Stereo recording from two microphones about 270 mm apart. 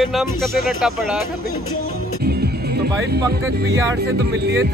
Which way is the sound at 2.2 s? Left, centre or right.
Right.